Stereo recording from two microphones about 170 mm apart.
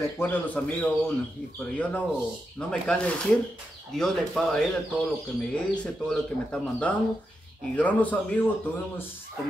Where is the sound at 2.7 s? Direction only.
5° left (ahead or behind).